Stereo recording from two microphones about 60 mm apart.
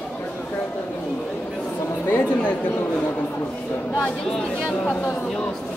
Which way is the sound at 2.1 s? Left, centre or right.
Left.